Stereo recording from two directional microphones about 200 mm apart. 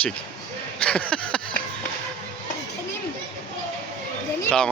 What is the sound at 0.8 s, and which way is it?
Speech, 5° left (ahead or behind).